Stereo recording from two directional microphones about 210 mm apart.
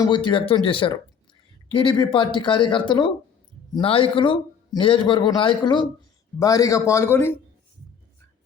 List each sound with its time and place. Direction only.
0.0 s a man's voice: 20° left (ahead or behind)